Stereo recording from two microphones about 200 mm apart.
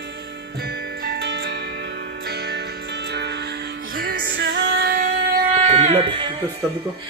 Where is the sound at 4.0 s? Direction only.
45° right (ahead or behind).